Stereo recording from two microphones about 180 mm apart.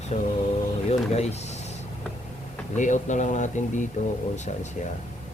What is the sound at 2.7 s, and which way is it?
Speech, 45° left (ahead or behind).